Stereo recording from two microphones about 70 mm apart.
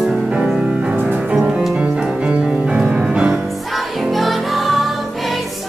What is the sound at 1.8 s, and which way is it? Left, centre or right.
Music, centre.